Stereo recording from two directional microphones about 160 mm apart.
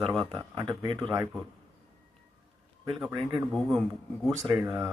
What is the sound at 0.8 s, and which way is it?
Speech, 25° right (ahead or behind).